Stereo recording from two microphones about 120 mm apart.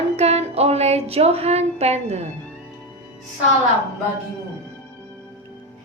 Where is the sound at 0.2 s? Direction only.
60° right (ahead or behind).